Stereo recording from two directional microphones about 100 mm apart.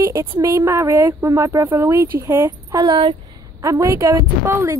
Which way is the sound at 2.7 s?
45° right (ahead or behind).